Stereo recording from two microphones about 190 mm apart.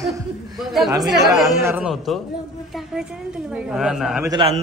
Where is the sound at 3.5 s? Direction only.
5° right (ahead or behind).